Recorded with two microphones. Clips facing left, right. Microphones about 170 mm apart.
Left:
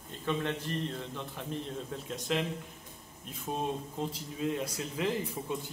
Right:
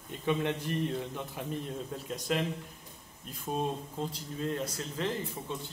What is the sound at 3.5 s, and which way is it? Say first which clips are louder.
A man's voice: right 1 dB; 5° left (ahead or behind).